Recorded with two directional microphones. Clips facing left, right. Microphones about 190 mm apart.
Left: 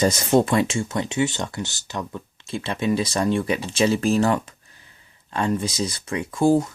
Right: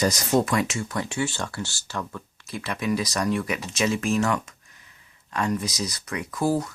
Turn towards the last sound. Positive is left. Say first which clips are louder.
# left 6 dB
turn(degrees=25)  # may be behind; listen again after turning